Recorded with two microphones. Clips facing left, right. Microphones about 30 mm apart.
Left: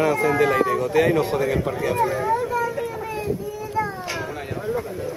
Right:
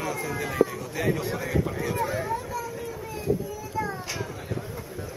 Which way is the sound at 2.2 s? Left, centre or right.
Left.